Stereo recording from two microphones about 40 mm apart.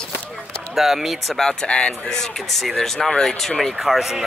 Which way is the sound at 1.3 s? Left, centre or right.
Centre.